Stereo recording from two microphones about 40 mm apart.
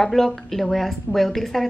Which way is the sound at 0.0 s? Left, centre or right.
Centre.